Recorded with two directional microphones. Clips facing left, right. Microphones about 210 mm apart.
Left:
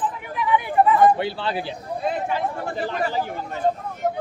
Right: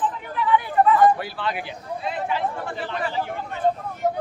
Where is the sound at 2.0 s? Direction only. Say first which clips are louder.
Left 2 dB; 45° left (ahead or behind).